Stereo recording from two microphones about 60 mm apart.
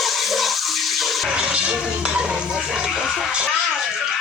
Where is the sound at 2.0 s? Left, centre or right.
Centre.